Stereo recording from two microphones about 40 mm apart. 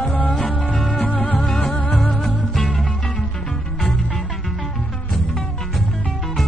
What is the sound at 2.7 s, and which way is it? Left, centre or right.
Music, centre.